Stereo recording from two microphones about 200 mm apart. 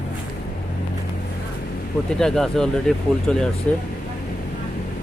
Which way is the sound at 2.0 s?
5° left (ahead or behind).